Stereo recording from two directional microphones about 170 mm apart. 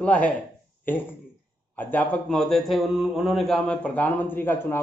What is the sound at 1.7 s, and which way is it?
A man's voice, 10° left (ahead or behind).